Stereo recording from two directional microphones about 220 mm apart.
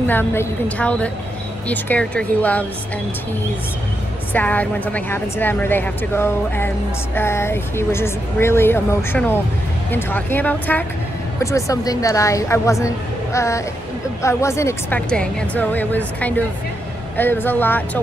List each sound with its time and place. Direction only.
0.0 s a woman's voice: 10° left (ahead or behind)
4.3 s a woman's voice: 5° left (ahead or behind)